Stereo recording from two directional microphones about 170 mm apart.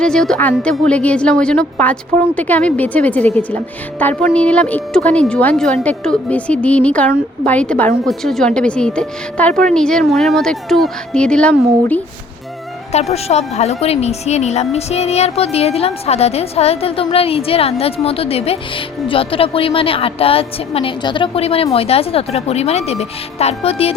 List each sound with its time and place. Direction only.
0.0 s a woman's voice: 5° left (ahead or behind)
12.9 s a woman's voice: 40° left (ahead or behind)